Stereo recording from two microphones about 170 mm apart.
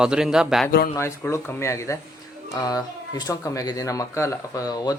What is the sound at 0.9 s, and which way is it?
Speech, 15° left (ahead or behind).